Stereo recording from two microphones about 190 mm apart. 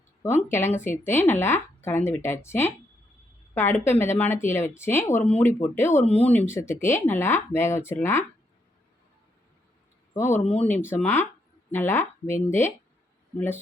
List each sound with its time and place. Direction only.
0.2 s speech: 10° left (ahead or behind)
10.2 s speech: 10° left (ahead or behind)
10.4 s speech: 30° left (ahead or behind)
10.7 s speech: 10° left (ahead or behind)